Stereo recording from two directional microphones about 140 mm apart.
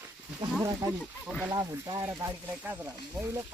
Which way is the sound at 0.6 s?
20° right (ahead or behind).